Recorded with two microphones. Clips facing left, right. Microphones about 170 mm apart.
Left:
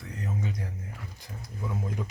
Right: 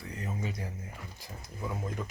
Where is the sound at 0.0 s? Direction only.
Centre (ahead or behind).